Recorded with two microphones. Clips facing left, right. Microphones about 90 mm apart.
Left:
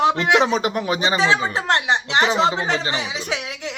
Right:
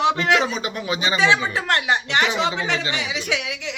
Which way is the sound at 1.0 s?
35° left (ahead or behind).